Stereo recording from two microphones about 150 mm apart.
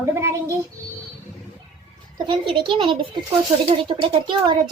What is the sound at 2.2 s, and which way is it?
A woman's voice, 35° right (ahead or behind).